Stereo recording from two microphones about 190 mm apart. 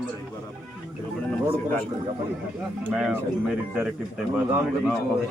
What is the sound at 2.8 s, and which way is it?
Speech, 5° right (ahead or behind).